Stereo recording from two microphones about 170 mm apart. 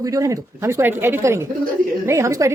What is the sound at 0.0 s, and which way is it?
Speech, 20° right (ahead or behind).